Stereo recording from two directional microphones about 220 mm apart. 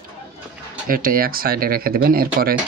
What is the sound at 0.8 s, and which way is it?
Speech, 40° right (ahead or behind).